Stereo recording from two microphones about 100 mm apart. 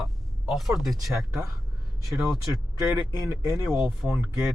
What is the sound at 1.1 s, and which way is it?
Speech, 30° right (ahead or behind).